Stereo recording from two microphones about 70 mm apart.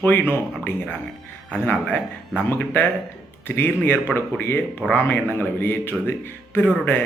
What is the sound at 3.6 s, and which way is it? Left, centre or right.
A man's voice, left.